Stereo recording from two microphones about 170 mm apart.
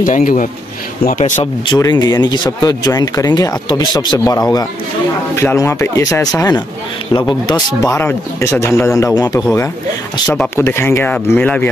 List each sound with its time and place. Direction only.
0.0 s speech: 55° left (ahead or behind)
1.7 s speech: 25° left (ahead or behind)
10.2 s speech: 5° left (ahead or behind)